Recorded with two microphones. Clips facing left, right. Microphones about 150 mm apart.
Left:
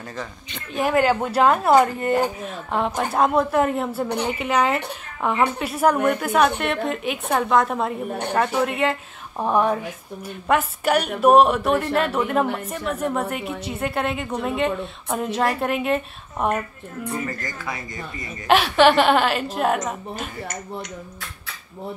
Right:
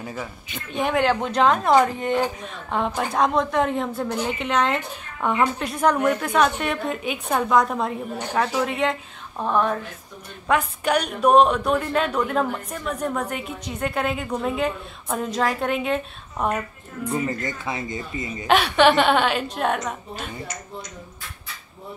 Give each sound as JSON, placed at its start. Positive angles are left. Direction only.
{"t": 0.0, "sound": "a woman's voice", "side_deg": -10}
{"t": 9.4, "sound": "a woman's voice", "side_deg": 15}
{"t": 17.1, "sound": "speech", "side_deg": -25}
{"t": 18.5, "sound": "a woman's voice", "side_deg": 0}